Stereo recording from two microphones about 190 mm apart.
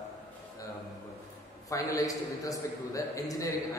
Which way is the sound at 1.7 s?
20° left (ahead or behind).